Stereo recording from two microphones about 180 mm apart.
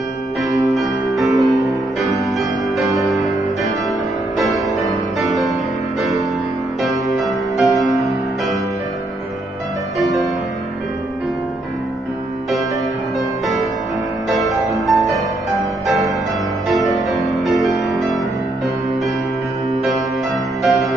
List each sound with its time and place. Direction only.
0.7 s music: centre (ahead or behind)
4.4 s music: centre (ahead or behind)
7.1 s music: centre (ahead or behind)
9.9 s music: centre (ahead or behind)
14.3 s music: centre (ahead or behind)
16.6 s music: centre (ahead or behind)
19.7 s music: centre (ahead or behind)